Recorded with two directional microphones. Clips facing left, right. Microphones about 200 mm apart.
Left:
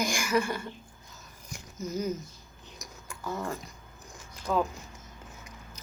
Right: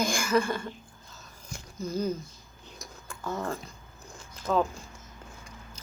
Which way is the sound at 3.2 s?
15° left (ahead or behind).